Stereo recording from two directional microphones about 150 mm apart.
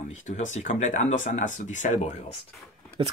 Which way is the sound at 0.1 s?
50° left (ahead or behind).